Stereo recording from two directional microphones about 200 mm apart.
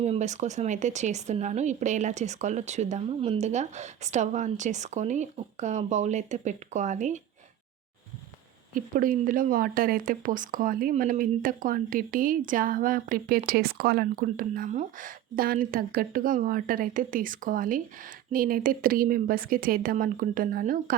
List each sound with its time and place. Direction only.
0.0 s speech: 35° right (ahead or behind)
8.7 s speech: 45° right (ahead or behind)